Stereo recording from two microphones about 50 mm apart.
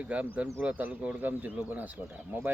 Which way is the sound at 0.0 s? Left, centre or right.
Right.